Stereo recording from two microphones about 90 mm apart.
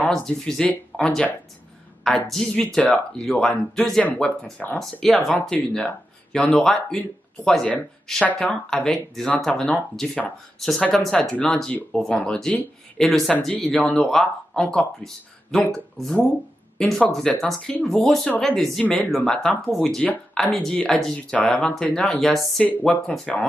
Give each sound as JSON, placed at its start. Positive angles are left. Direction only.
{"t": 0.1, "sound": "speech", "side_deg": 10}
{"t": 4.0, "sound": "speech", "side_deg": 15}
{"t": 5.0, "sound": "speech", "side_deg": 5}
{"t": 22.6, "sound": "speech", "side_deg": 15}